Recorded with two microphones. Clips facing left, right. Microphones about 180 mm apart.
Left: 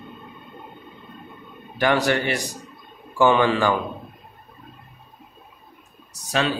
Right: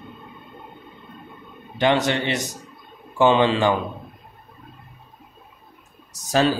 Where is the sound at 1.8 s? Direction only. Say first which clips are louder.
Even; 20° right (ahead or behind).